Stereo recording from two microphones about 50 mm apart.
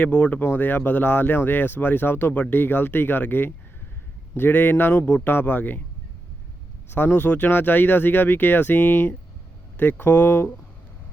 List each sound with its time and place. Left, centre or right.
0.0 s speech: left
0.5 s speech: left
6.9 s speech: left